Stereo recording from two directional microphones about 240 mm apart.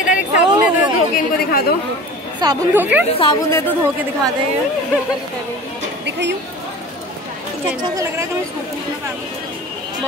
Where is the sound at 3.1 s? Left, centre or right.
Centre.